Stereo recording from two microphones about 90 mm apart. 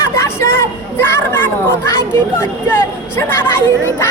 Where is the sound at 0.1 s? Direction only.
30° left (ahead or behind).